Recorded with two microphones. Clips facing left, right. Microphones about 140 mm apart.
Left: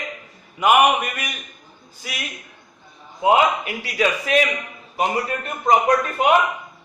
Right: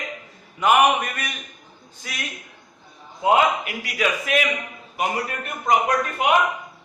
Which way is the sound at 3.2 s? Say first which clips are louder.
Left 2 dB; 25° left (ahead or behind).